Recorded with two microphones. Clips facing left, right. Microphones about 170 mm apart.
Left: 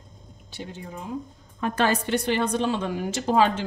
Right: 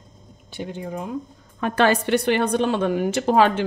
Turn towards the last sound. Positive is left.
turn(degrees=-65)  # may be behind; listen again after turning